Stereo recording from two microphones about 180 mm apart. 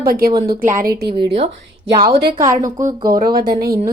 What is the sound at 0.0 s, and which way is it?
Speech, 55° right (ahead or behind).